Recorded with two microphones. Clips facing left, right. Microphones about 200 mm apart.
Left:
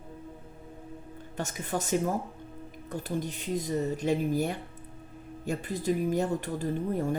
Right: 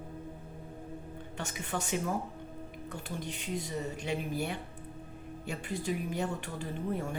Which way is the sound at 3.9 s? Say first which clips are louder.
Left 8 dB; 40° left (ahead or behind).